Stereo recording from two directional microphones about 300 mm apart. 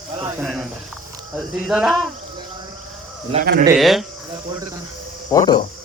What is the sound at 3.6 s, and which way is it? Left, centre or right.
Speech, centre.